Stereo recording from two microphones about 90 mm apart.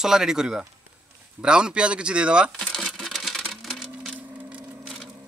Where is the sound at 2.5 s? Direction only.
5° left (ahead or behind).